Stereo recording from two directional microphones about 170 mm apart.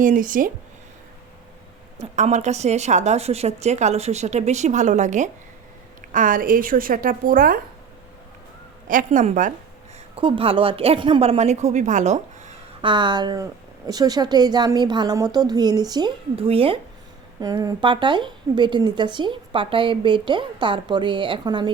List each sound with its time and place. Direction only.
0.0 s speech: 50° right (ahead or behind)
2.0 s speech: 45° right (ahead or behind)
9.0 s speech: 45° right (ahead or behind)
10.2 s speech: 30° right (ahead or behind)
12.8 s a woman's voice: 30° right (ahead or behind)
17.4 s a woman's voice: 20° right (ahead or behind)